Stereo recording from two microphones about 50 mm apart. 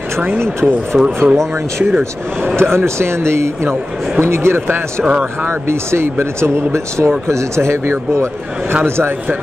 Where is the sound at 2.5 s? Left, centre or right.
Right.